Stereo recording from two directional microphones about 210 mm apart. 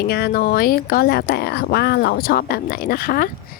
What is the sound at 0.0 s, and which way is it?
Speech, 50° left (ahead or behind).